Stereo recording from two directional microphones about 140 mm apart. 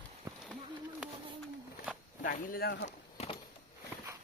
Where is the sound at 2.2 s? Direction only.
90° left.